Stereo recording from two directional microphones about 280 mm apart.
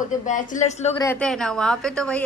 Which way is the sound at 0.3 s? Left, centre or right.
Left.